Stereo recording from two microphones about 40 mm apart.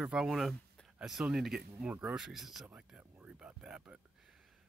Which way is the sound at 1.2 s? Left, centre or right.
Right.